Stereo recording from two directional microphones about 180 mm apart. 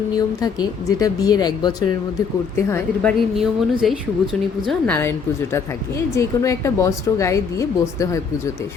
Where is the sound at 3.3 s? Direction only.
Centre (ahead or behind).